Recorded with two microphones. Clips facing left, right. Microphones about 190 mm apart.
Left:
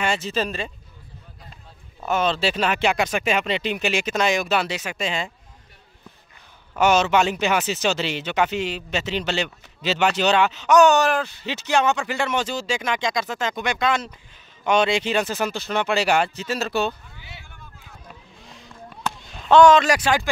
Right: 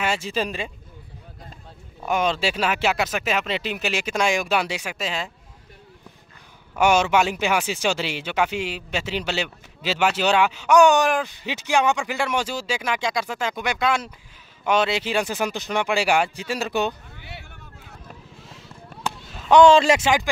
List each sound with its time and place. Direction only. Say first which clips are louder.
0.0 s speech: left 1 dB; 10° right (ahead or behind)
2.0 s speech: left 1 dB; 10° right (ahead or behind)
6.7 s speech: even; 10° right (ahead or behind)
17.1 s vehicle: right 3 dB; 60° right (ahead or behind)
18.4 s a sound: left 1 dB; 5° right (ahead or behind)
19.5 s speech: even; 25° right (ahead or behind)
20.0 s speech: even; 15° right (ahead or behind)